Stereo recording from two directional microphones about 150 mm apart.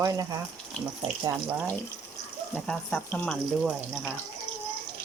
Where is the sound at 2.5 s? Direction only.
5° left (ahead or behind).